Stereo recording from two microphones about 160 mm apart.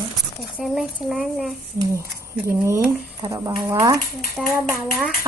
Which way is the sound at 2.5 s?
15° right (ahead or behind).